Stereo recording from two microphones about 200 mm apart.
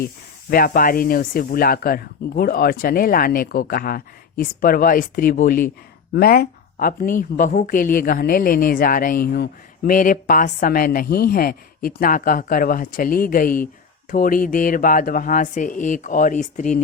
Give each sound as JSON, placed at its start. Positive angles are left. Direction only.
{"t": 0.5, "sound": "a woman's voice", "side_deg": 45}